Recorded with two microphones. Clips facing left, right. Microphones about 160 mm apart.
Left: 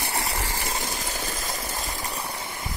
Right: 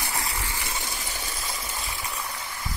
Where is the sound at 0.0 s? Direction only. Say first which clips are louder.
Left 2 dB; 30° left (ahead or behind).